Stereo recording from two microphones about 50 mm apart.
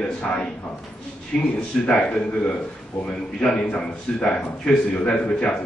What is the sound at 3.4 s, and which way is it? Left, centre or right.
A man's voice, left.